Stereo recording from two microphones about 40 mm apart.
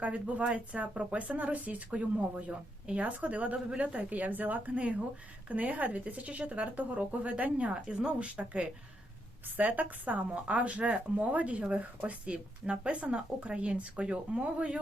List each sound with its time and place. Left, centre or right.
0.0 s speech: right
7.7 s a woman's voice: right
9.6 s a woman's voice: right